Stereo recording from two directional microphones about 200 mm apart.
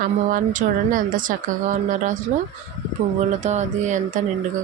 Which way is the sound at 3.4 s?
35° right (ahead or behind).